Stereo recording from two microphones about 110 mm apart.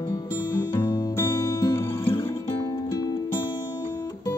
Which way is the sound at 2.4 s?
35° left (ahead or behind).